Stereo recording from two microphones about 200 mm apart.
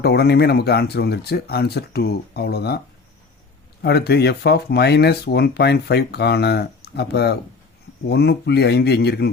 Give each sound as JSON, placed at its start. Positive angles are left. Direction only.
{"t": 0.0, "sound": "speech", "side_deg": 55}
{"t": 3.8, "sound": "speech", "side_deg": 55}